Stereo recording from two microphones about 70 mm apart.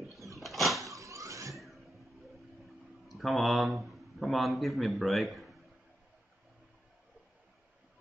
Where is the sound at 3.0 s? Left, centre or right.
Centre.